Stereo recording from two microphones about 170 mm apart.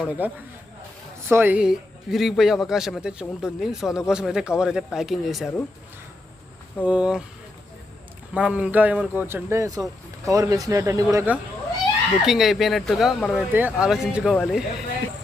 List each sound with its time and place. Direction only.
0.0 s a man's voice: 10° right (ahead or behind)
1.3 s a man's voice: 10° right (ahead or behind)
6.8 s a man's voice: 5° right (ahead or behind)
8.3 s a man's voice: 5° right (ahead or behind)
12.2 s a man's voice: centre (ahead or behind)